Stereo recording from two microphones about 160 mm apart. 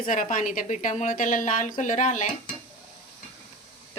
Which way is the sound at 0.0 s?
55° left (ahead or behind).